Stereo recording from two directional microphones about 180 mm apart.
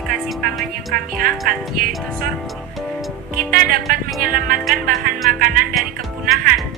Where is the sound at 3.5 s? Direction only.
50° right (ahead or behind).